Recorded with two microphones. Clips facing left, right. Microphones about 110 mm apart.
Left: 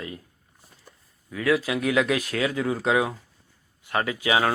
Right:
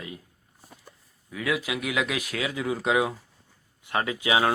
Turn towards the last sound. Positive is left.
turn(degrees=-20)  # may be behind; listen again after turning